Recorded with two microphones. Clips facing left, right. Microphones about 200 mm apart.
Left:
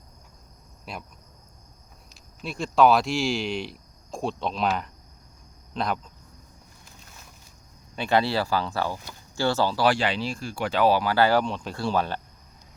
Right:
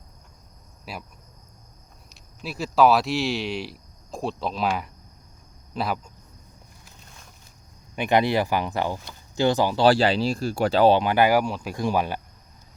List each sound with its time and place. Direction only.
0.9 s speech: 5° right (ahead or behind)
2.0 s speech: 5° right (ahead or behind)
7.9 s speech: 15° right (ahead or behind)
9.8 s speech: 35° right (ahead or behind); by 12.2 s 10° right (ahead or behind)